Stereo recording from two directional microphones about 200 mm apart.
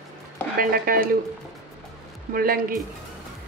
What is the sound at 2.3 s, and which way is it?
Speech, 45° right (ahead or behind).